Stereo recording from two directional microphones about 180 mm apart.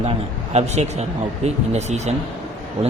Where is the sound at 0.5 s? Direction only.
35° right (ahead or behind).